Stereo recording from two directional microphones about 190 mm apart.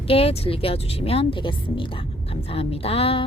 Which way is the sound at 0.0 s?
30° left (ahead or behind).